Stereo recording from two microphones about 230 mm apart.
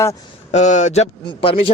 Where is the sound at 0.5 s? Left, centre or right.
Left.